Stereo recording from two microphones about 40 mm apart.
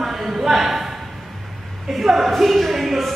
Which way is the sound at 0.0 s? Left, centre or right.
Centre.